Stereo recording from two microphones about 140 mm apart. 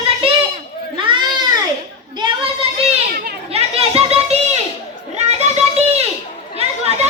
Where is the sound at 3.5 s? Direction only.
45° right (ahead or behind).